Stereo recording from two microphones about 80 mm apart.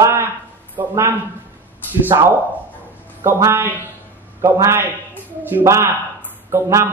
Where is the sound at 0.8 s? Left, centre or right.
Right.